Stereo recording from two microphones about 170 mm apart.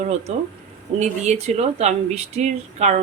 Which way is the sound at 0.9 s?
40° right (ahead or behind).